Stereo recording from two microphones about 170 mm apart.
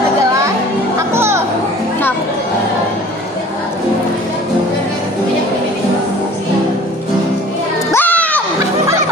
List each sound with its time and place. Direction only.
0.9 s music: 15° right (ahead or behind)
7.9 s music: 10° left (ahead or behind)